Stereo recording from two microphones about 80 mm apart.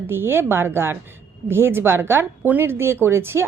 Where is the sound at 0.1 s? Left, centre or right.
Right.